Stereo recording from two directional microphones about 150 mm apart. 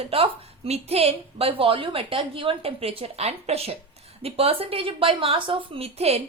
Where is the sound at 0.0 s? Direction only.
40° right (ahead or behind).